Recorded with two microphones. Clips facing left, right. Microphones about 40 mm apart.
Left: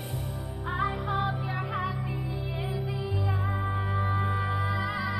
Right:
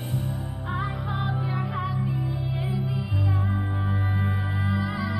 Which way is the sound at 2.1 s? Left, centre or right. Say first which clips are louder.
Right 4 dB; centre.